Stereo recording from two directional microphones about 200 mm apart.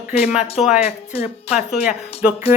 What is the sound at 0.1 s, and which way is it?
Speech, 30° left (ahead or behind).